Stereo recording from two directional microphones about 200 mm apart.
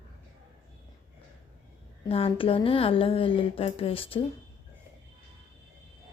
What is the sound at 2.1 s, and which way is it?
Speech, 30° left (ahead or behind).